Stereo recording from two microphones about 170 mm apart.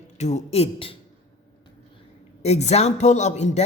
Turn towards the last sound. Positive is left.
turn(degrees=40)  # may be behind; listen again after turning